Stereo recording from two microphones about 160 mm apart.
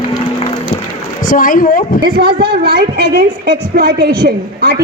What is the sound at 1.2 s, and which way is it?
Speech, 55° left (ahead or behind).